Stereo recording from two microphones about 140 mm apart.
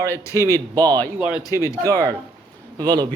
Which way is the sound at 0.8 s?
30° right (ahead or behind).